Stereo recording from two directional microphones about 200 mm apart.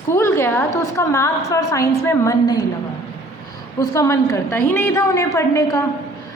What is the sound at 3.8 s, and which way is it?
A woman's voice, 15° left (ahead or behind).